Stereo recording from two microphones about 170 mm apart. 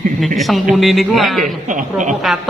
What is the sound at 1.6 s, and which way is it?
Speech, 45° right (ahead or behind).